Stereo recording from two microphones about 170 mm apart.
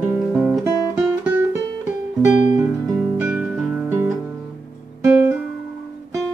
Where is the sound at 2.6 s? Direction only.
10° right (ahead or behind).